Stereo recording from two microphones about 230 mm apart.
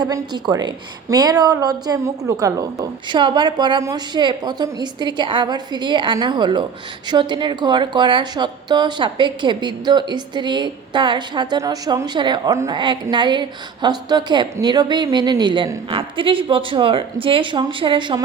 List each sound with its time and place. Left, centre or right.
0.0 s a woman's voice: centre